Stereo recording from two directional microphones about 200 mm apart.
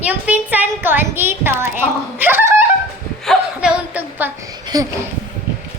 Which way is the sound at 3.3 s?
5° right (ahead or behind).